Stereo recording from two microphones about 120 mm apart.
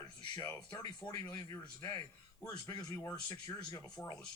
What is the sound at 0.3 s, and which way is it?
A man's voice, 25° left (ahead or behind).